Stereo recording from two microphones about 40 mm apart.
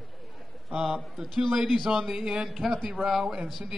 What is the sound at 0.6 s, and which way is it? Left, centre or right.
A man's voice, centre.